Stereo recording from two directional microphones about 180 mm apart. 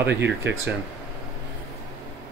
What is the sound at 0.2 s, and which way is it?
Speech, 75° right (ahead or behind).